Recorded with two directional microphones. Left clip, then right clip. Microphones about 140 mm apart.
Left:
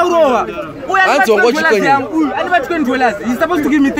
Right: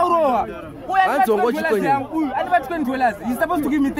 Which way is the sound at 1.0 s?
35° right (ahead or behind).